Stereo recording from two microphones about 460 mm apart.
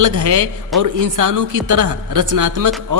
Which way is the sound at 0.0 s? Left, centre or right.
Right.